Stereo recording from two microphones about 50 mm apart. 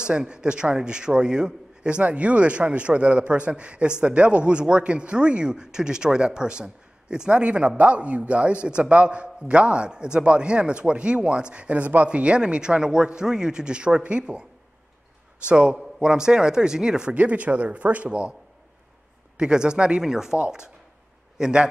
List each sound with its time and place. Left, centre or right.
0.0 s speech: centre
15.4 s speech: centre
17.1 s speech: right
19.3 s speech: centre